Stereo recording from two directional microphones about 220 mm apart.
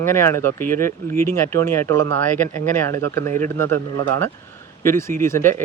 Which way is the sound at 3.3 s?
35° right (ahead or behind).